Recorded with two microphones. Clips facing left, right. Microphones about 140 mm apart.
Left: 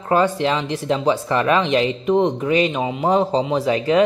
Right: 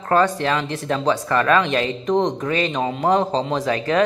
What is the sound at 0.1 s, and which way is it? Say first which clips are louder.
A woman's voice: left 1 dB; 15° left (ahead or behind).